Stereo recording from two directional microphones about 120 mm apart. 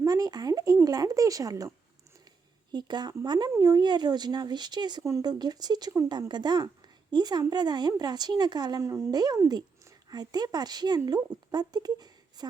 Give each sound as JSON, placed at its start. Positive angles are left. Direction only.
{"t": 0.0, "sound": "speech", "side_deg": -30}
{"t": 2.7, "sound": "speech", "side_deg": -40}
{"t": 8.8, "sound": "speech", "side_deg": -25}